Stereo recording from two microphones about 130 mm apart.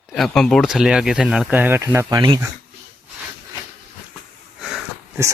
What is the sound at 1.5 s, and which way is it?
Speech, 15° right (ahead or behind).